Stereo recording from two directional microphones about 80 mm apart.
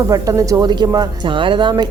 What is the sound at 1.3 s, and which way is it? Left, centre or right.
Speech, right.